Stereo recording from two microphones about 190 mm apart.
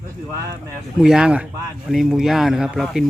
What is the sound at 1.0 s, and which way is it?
Speech, 5° right (ahead or behind).